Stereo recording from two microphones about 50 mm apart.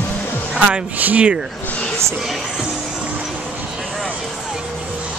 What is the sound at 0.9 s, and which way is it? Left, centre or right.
Speech, right.